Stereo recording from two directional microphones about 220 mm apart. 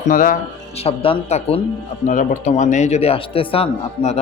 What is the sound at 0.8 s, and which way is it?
A man's voice, 25° left (ahead or behind).